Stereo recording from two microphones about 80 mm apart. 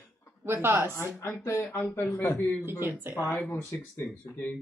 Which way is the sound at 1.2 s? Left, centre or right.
Left.